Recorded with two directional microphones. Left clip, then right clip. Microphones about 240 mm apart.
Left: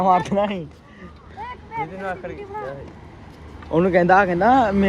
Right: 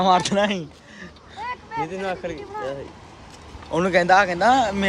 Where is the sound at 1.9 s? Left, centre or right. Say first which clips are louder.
Right 2 dB; right.